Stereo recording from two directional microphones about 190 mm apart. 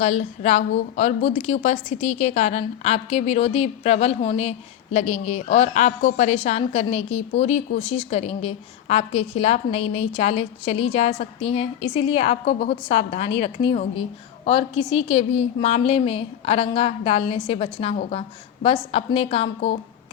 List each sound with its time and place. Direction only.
0.0 s a woman's voice: 35° left (ahead or behind)